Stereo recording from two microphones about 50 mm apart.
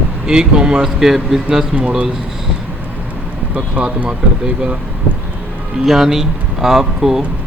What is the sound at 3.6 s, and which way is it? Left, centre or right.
Speech, centre.